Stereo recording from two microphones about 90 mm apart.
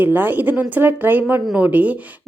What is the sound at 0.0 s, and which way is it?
A woman's voice, 20° right (ahead or behind).